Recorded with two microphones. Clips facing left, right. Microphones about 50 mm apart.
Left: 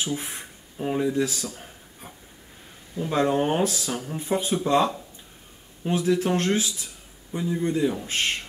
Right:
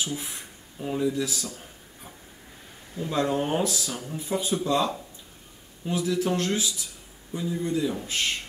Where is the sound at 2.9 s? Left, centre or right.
Left.